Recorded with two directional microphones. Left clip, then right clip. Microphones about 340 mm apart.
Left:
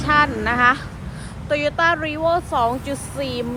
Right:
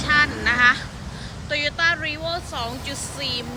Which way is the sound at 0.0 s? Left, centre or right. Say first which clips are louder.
Left 2 dB; centre.